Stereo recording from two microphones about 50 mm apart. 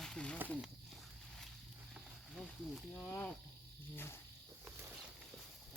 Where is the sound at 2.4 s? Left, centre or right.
Centre.